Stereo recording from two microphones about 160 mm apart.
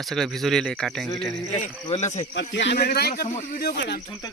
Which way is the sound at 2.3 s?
90° left.